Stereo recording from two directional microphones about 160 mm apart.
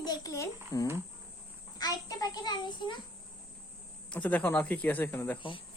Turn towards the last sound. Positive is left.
turn(degrees=15)  # may be behind; listen again after turning